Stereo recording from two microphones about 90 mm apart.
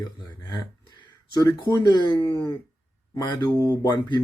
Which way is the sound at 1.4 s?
50° left (ahead or behind).